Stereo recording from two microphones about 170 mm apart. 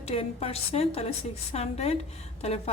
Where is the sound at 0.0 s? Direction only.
35° left (ahead or behind).